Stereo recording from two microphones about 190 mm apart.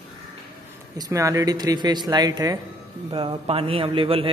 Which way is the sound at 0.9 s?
20° right (ahead or behind).